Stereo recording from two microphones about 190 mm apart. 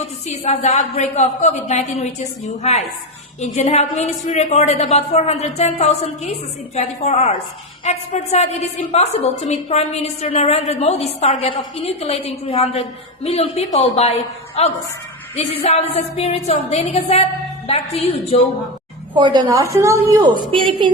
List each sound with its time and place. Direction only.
0.3 s a woman's voice: 40° left (ahead or behind)
3.4 s a woman's voice: 35° left (ahead or behind)
19.1 s a woman's voice: 25° right (ahead or behind)
20.5 s a woman's voice: 25° right (ahead or behind)